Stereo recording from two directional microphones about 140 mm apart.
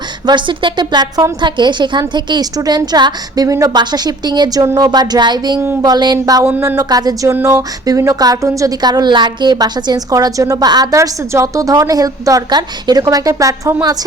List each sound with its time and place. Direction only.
0.3 s a woman's voice: 35° right (ahead or behind)